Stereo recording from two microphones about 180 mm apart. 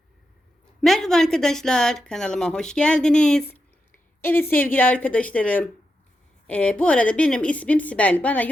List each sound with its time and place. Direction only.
0.8 s a woman's voice: centre (ahead or behind)